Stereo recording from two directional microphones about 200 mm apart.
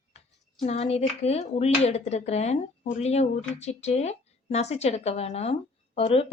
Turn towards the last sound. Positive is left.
turn(degrees=30)  # may be behind; listen again after turning